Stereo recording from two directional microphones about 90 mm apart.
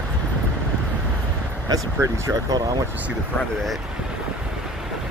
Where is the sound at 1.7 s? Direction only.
40° right (ahead or behind).